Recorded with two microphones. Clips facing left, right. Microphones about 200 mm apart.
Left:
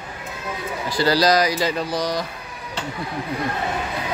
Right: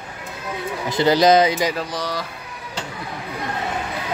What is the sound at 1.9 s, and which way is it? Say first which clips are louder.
Speech: left 3 dB; 15° left (ahead or behind).